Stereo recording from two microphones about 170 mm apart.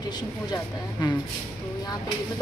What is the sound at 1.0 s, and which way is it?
Speech, 25° left (ahead or behind).